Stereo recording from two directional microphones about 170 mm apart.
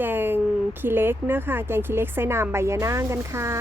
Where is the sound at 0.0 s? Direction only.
10° right (ahead or behind).